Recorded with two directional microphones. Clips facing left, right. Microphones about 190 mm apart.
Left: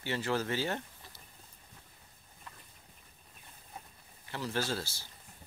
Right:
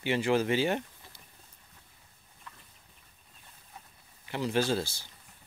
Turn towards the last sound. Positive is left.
turn(degrees=-20)  # may be behind; listen again after turning